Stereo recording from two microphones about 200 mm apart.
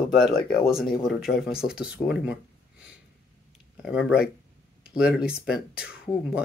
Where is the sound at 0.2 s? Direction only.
50° left (ahead or behind).